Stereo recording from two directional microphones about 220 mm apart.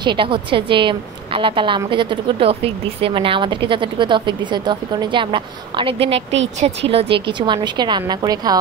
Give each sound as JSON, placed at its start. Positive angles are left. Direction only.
{"t": 0.0, "sound": "a woman's voice", "side_deg": -20}